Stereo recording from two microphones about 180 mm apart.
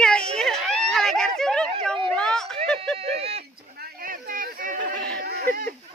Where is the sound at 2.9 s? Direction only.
35° right (ahead or behind).